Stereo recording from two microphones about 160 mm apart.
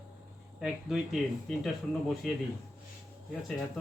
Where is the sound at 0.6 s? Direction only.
5° right (ahead or behind).